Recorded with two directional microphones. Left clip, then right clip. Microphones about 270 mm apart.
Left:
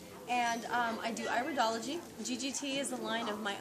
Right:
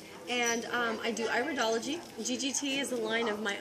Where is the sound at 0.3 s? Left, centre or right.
Centre.